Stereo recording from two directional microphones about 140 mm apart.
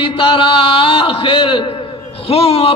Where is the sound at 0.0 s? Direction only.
40° left (ahead or behind).